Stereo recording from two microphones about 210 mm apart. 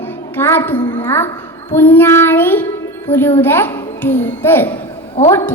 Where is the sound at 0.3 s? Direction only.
10° left (ahead or behind).